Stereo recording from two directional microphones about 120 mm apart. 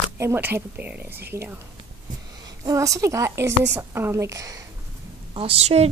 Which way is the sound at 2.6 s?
25° right (ahead or behind).